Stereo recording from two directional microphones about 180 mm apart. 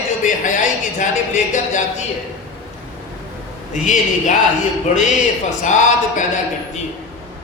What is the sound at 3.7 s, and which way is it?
Speech, 45° left (ahead or behind).